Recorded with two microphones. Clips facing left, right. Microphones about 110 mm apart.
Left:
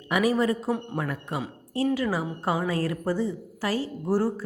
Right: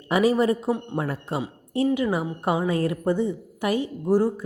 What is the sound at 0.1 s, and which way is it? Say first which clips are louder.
Speech: right 3 dB; 25° right (ahead or behind).